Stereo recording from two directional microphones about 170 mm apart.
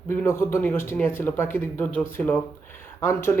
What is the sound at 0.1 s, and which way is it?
Speech, 15° left (ahead or behind).